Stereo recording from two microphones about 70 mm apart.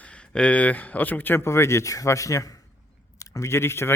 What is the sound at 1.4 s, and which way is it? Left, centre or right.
Speech, left.